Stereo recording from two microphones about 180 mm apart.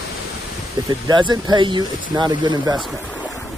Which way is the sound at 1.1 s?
25° right (ahead or behind).